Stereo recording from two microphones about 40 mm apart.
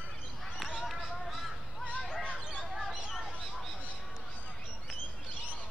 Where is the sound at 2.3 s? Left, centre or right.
Right.